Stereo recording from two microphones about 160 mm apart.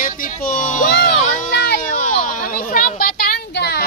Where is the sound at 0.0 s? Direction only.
55° left (ahead or behind); by 3.8 s 90° left.